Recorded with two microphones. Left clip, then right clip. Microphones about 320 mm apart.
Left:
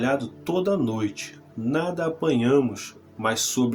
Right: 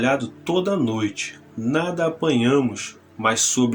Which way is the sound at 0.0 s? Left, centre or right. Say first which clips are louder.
Right 4 dB; left.